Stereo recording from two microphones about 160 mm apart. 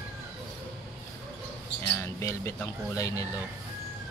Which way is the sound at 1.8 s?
20° left (ahead or behind).